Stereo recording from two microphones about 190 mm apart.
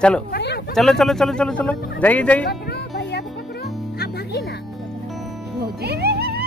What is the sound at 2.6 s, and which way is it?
Music, 60° left (ahead or behind).